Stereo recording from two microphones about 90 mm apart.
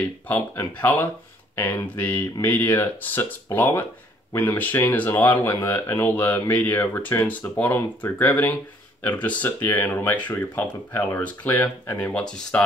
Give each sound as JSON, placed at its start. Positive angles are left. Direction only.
{"t": 0.3, "sound": "speech", "side_deg": 20}